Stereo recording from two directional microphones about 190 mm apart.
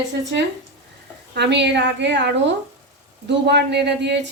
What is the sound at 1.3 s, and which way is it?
Speech, 65° right (ahead or behind).